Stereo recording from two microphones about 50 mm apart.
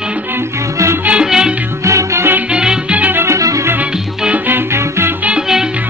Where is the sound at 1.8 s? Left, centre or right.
Right.